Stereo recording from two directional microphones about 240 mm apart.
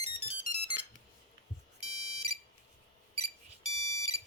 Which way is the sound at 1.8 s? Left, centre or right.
Right.